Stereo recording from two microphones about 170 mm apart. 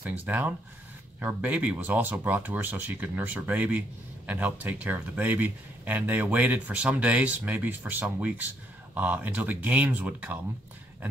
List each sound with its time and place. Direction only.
0.0 s speech: 10° right (ahead or behind)